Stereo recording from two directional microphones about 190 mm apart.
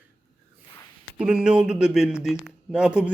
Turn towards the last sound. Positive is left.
turn(degrees=-5)  # may be behind; listen again after turning